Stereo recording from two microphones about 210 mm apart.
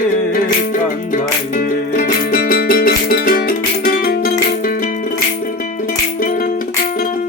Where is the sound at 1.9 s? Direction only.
45° left (ahead or behind).